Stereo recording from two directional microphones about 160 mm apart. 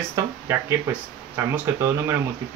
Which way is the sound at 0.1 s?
15° right (ahead or behind).